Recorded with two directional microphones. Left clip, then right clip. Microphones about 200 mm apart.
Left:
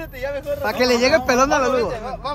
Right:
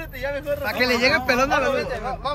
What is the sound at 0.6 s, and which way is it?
Speech, 15° left (ahead or behind).